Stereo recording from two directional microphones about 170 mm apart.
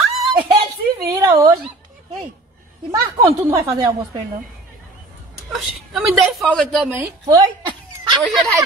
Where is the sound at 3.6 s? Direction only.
25° right (ahead or behind).